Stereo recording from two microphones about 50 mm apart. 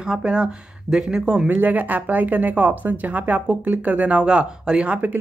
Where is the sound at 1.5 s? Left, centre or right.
Right.